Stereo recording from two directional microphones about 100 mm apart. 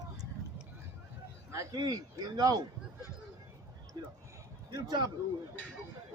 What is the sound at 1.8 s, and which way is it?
Speech, 40° right (ahead or behind).